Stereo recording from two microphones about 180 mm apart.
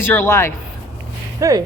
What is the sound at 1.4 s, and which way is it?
Speech, 20° right (ahead or behind).